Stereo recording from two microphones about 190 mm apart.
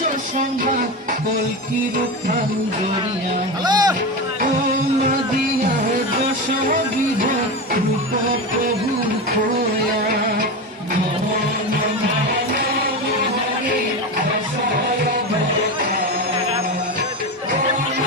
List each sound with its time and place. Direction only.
3.6 s music: 20° right (ahead or behind)